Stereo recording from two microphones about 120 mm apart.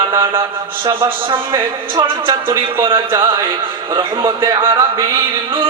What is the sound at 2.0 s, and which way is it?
Speech, 40° right (ahead or behind).